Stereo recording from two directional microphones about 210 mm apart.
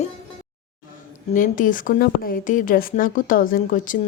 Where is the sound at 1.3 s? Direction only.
40° left (ahead or behind).